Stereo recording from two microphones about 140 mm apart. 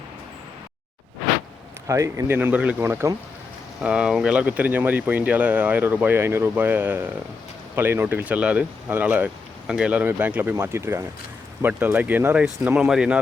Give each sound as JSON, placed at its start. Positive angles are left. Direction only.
{"t": 1.9, "sound": "speech", "side_deg": -20}
{"t": 3.8, "sound": "speech", "side_deg": -5}